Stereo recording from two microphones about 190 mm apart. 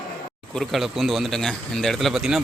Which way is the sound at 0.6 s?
Centre (ahead or behind).